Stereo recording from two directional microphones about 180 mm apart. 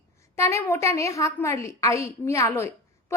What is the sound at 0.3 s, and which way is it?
A woman's voice, 15° left (ahead or behind).